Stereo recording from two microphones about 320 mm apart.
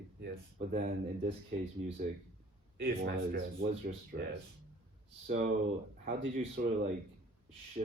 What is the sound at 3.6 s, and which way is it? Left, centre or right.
Speech, right.